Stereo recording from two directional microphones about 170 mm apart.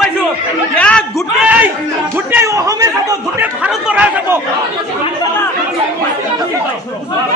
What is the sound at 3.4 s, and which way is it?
Speech, 10° right (ahead or behind).